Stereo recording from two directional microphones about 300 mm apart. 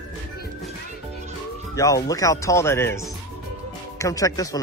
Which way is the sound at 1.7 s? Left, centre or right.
Centre.